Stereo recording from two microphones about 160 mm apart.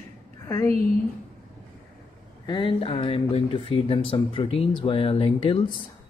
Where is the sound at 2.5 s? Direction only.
30° left (ahead or behind).